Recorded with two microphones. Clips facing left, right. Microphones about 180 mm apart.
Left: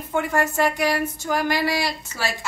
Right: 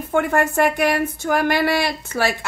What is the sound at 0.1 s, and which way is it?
Speech, 55° right (ahead or behind).